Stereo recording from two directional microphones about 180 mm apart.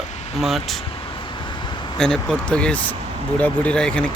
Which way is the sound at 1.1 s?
25° left (ahead or behind).